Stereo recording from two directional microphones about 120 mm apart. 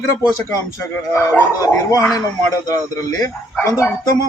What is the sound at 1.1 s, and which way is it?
Speech, 25° left (ahead or behind).